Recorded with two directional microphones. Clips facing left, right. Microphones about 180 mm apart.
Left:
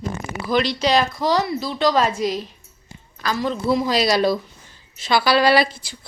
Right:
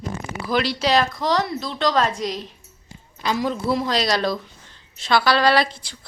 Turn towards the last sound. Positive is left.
turn(degrees=5)  # may be behind; listen again after turning